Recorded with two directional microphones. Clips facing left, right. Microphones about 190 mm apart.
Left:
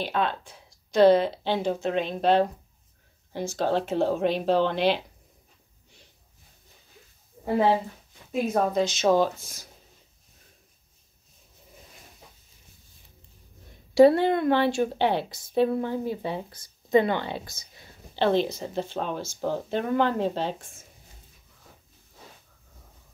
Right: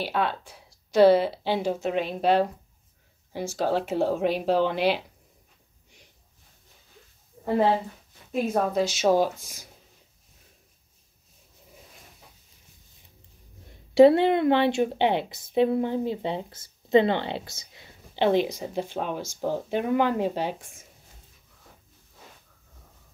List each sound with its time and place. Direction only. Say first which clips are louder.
0.0 s speech: even; 10° right (ahead or behind)
8.3 s speech: even; centre (ahead or behind)
13.9 s a woman's voice: right 1 dB; 25° right (ahead or behind)